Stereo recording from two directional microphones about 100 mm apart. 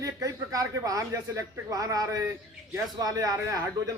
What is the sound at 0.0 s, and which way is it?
A man's voice, 35° right (ahead or behind).